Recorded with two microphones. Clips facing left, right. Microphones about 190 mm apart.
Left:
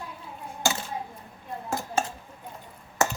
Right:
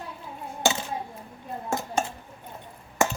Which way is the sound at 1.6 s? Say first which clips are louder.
Even; 20° right (ahead or behind).